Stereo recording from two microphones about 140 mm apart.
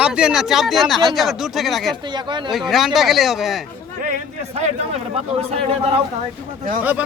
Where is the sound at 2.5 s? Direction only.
Centre (ahead or behind).